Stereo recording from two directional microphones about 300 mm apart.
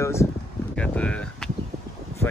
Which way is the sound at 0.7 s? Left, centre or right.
Centre.